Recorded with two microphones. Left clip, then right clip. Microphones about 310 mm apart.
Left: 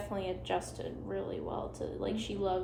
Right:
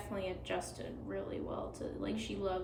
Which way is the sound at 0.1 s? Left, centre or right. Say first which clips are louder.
Left 3 dB; centre.